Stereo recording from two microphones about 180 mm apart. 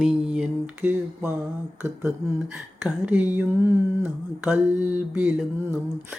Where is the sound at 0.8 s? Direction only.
15° right (ahead or behind).